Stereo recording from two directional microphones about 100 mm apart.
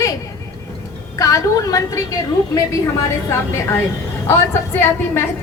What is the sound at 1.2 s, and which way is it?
Speech, 35° left (ahead or behind).